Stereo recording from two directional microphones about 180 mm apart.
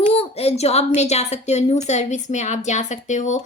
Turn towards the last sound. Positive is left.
turn(degrees=40)  # may be behind; listen again after turning